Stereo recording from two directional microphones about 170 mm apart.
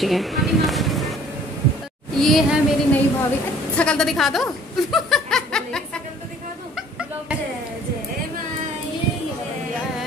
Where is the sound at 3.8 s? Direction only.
5° left (ahead or behind).